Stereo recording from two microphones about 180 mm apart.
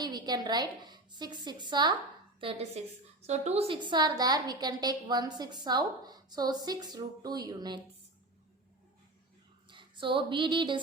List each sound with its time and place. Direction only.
0.0 s a woman's voice: 20° right (ahead or behind)
9.6 s speech: 25° right (ahead or behind)